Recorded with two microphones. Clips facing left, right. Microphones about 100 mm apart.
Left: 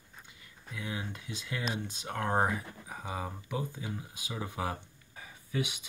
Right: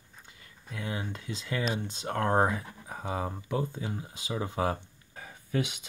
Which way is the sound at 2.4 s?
40° right (ahead or behind).